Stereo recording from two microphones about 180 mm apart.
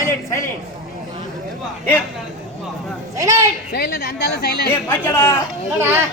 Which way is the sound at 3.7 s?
60° left (ahead or behind).